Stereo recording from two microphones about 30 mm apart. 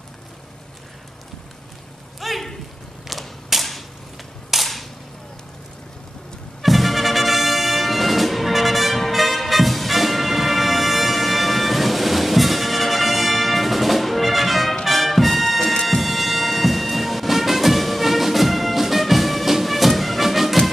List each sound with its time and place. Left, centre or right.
2.1 s a sound: centre
3.1 s mechanisms: centre
4.5 s cap gun: centre
6.6 s music: centre